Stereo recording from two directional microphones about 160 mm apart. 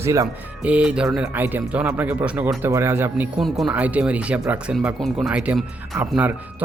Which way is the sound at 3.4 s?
Centre (ahead or behind).